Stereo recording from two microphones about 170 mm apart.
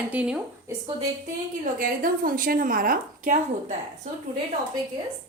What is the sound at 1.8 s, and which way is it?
A woman's voice, 55° right (ahead or behind).